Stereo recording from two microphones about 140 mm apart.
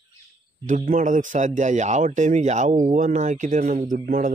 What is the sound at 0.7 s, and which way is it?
Speech, 65° right (ahead or behind).